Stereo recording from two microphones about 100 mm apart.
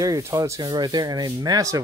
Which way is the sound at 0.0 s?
35° right (ahead or behind).